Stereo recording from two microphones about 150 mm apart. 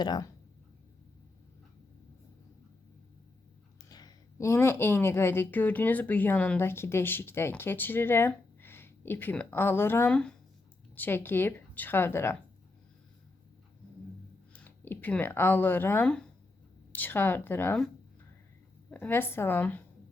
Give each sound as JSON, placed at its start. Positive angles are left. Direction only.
{"t": 0.0, "sound": "speech", "side_deg": 30}
{"t": 3.8, "sound": "a woman's voice", "side_deg": 25}
{"t": 14.5, "sound": "a woman's voice", "side_deg": 10}
{"t": 18.9, "sound": "a woman's voice", "side_deg": 10}